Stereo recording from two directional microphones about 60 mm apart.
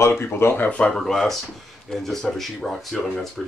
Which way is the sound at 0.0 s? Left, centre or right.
Left.